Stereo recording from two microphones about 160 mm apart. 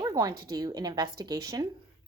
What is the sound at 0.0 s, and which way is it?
A woman's voice, 25° right (ahead or behind).